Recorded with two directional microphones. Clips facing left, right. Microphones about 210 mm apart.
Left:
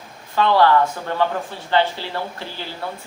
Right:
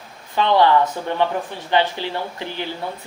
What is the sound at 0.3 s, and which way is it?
Speech, 20° right (ahead or behind).